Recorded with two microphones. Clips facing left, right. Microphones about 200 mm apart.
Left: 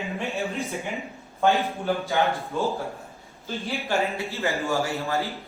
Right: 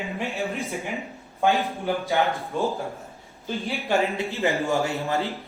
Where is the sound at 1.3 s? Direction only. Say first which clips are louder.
Even; 15° right (ahead or behind).